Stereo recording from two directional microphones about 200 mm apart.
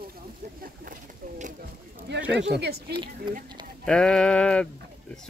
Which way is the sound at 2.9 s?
25° right (ahead or behind).